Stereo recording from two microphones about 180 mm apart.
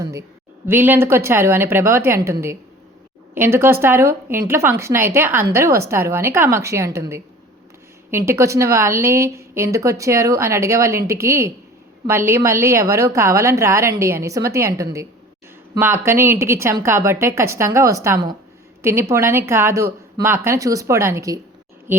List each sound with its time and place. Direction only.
0.0 s a woman's voice: 15° right (ahead or behind)